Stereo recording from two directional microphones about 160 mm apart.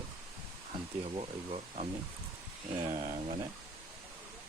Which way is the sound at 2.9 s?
55° right (ahead or behind).